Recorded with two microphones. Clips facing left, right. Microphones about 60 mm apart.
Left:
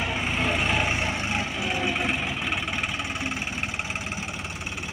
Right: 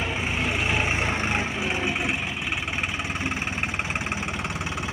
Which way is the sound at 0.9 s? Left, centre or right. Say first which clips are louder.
Right 2 dB; right.